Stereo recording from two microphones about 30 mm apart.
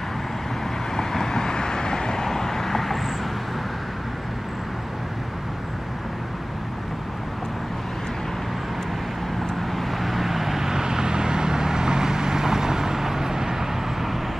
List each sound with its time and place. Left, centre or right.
0.9 s vehicle: centre
9.6 s vehicle: centre